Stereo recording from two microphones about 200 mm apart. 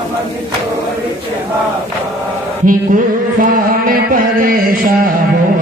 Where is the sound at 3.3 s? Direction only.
45° right (ahead or behind).